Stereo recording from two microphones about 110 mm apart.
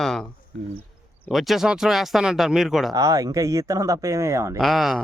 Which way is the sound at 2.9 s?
30° right (ahead or behind).